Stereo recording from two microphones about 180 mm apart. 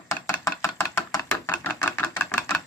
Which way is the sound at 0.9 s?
15° left (ahead or behind).